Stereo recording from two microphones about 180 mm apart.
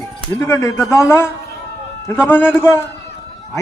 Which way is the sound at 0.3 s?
15° left (ahead or behind).